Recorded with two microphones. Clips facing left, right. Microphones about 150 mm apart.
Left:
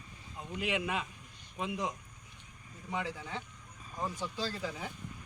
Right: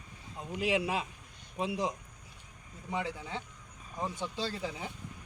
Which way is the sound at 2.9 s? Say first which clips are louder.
Right 2 dB; 25° right (ahead or behind).